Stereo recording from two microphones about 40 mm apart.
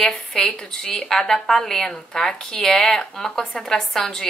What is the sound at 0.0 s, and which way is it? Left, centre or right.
Speech, centre.